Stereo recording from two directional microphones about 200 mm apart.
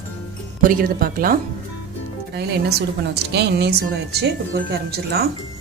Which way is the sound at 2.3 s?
55° right (ahead or behind).